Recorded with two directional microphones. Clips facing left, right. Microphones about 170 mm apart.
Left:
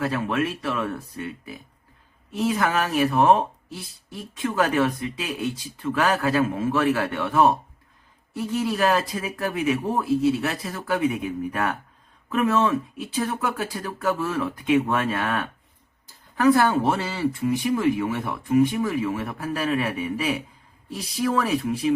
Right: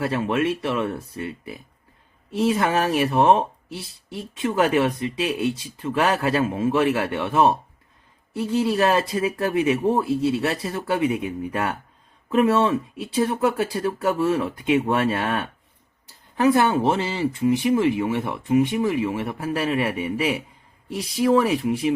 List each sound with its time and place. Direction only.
0.0 s speech: 25° right (ahead or behind)
2.3 s speech: 30° right (ahead or behind)